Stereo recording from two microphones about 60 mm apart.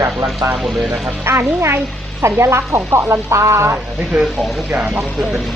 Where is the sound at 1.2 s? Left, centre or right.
Right.